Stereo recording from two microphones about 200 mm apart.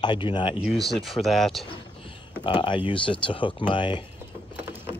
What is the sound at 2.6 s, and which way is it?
Speech, 25° left (ahead or behind).